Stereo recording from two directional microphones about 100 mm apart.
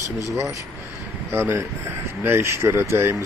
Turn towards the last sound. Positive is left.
turn(degrees=-25)  # may be behind; listen again after turning